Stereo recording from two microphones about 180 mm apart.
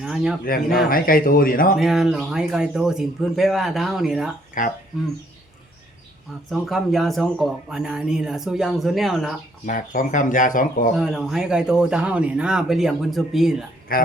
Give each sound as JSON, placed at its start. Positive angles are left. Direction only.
{"t": 0.0, "sound": "speech", "side_deg": -5}
{"t": 0.4, "sound": "speech", "side_deg": 55}
{"t": 1.8, "sound": "speech", "side_deg": 0}
{"t": 4.6, "sound": "speech", "side_deg": 45}
{"t": 6.5, "sound": "speech", "side_deg": 0}
{"t": 9.6, "sound": "speech", "side_deg": 45}
{"t": 10.9, "sound": "speech", "side_deg": 0}
{"t": 13.9, "sound": "speech", "side_deg": 55}